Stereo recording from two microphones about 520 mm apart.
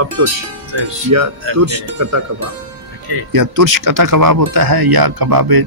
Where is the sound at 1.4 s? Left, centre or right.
Right.